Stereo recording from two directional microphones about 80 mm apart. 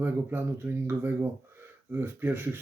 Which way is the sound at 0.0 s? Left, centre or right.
Right.